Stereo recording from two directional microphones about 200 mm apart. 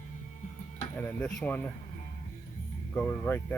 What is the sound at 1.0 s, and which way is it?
Speech, 10° left (ahead or behind).